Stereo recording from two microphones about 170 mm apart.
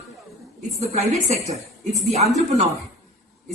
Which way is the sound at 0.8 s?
40° right (ahead or behind).